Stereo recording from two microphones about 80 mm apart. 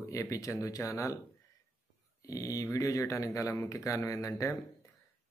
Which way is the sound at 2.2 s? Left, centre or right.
Left.